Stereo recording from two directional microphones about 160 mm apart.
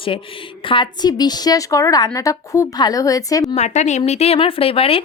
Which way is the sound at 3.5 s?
45° left (ahead or behind).